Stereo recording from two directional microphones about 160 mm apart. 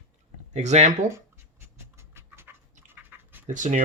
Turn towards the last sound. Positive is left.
turn(degrees=-50)  # may be behind; listen again after turning